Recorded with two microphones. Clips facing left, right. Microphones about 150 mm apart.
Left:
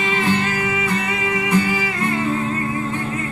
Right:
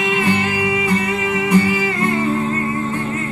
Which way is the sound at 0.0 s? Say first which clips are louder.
Right 2 dB; centre (ahead or behind).